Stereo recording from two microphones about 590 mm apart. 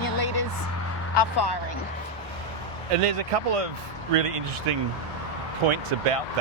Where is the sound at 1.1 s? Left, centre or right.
Left.